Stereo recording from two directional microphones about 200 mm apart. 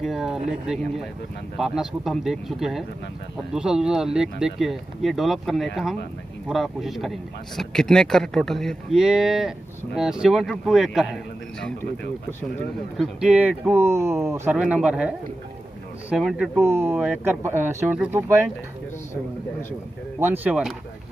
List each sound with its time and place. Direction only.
0.0 s a man's voice: centre (ahead or behind)
12.9 s a man's voice: centre (ahead or behind)
16.6 s speech: 10° right (ahead or behind)
20.2 s speech: 10° right (ahead or behind)